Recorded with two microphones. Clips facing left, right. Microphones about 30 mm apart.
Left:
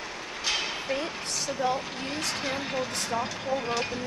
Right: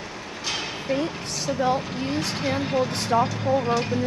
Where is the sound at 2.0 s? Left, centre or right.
Centre.